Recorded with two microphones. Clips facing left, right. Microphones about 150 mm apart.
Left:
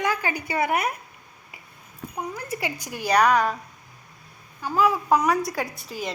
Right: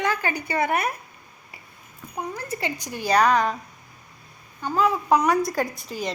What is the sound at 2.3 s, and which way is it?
A woman's voice, 10° left (ahead or behind).